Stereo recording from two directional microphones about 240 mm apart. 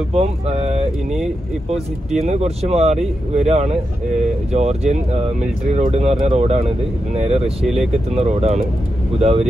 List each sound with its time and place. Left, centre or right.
0.1 s speech: right
2.2 s speech: right